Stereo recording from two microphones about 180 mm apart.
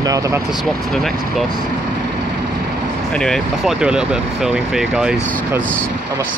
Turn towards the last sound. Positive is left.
turn(degrees=-5)  # may be behind; listen again after turning